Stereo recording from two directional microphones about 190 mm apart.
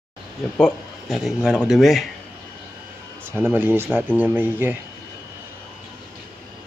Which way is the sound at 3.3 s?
10° right (ahead or behind).